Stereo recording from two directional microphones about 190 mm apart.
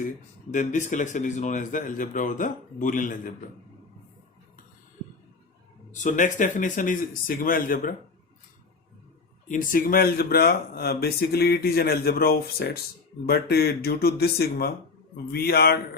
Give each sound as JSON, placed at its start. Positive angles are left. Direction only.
{"t": 0.5, "sound": "speech", "side_deg": 40}
{"t": 5.9, "sound": "speech", "side_deg": 40}
{"t": 9.5, "sound": "speech", "side_deg": 45}